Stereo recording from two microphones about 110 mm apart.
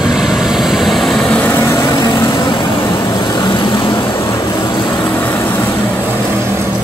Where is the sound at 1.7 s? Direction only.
40° left (ahead or behind).